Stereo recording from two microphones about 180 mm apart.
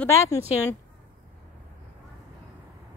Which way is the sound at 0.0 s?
15° left (ahead or behind).